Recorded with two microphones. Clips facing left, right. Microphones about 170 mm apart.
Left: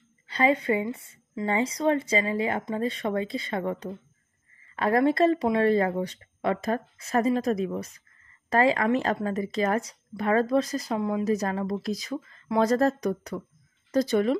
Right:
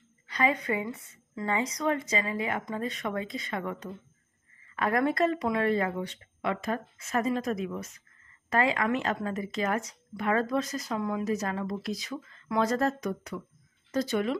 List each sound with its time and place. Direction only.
0.3 s a woman's voice: 30° left (ahead or behind)